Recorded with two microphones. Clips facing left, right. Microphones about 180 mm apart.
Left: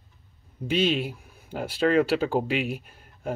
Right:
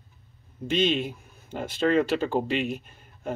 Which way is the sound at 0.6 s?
5° left (ahead or behind).